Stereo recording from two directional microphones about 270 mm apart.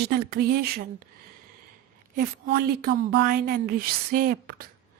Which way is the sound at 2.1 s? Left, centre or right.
Right.